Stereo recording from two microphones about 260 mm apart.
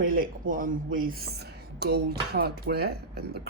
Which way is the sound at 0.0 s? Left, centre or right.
Right.